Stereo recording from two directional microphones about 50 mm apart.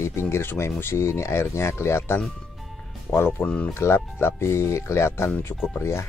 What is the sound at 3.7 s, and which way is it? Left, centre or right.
Speech, left.